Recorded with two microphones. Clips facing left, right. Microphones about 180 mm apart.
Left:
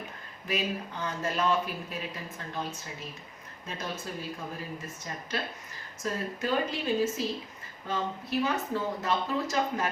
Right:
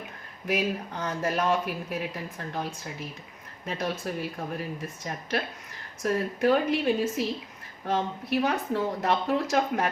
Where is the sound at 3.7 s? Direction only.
65° right (ahead or behind).